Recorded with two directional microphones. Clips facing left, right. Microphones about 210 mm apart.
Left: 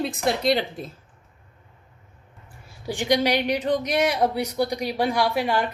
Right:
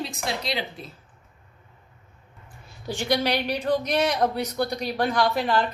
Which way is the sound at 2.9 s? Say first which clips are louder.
Left 3 dB; 15° left (ahead or behind).